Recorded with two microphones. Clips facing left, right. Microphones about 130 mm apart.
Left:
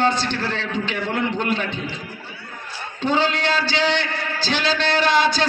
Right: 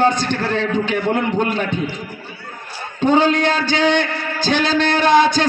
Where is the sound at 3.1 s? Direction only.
50° right (ahead or behind).